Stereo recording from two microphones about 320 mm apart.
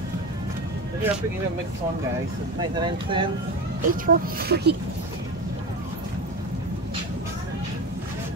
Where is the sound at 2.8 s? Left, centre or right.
Centre.